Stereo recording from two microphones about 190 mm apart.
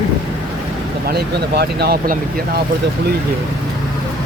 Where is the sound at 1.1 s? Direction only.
55° right (ahead or behind).